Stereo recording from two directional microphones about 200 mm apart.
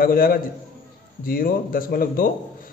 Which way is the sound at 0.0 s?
45° left (ahead or behind).